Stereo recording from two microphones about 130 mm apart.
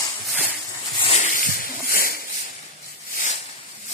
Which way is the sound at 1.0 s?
60° left (ahead or behind).